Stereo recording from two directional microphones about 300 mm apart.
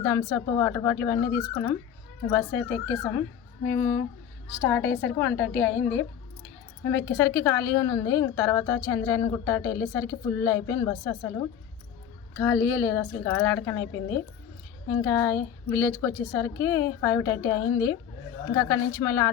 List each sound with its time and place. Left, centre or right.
0.0 s a woman's voice: centre
3.7 s a woman's voice: centre
12.5 s a woman's voice: left
12.8 s a woman's voice: centre